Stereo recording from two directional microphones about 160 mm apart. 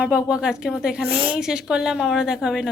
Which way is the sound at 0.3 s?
5° right (ahead or behind).